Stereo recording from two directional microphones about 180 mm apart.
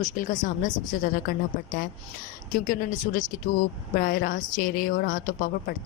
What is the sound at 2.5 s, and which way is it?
A woman's voice, 50° left (ahead or behind).